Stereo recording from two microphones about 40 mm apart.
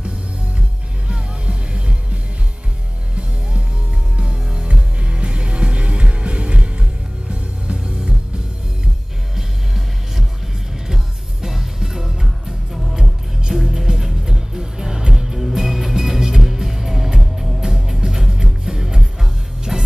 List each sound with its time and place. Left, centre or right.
1.0 s music: right
4.2 s music: right
9.3 s music: centre
11.4 s music: centre